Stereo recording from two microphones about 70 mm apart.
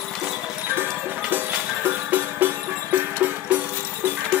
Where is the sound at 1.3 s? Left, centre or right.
Right.